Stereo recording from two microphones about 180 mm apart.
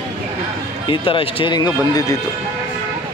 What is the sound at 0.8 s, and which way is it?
Speech, 30° left (ahead or behind).